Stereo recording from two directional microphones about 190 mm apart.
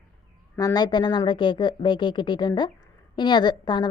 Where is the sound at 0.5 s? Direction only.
20° left (ahead or behind).